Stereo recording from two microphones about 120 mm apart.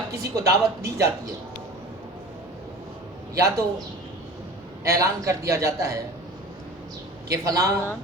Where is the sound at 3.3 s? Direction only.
25° right (ahead or behind).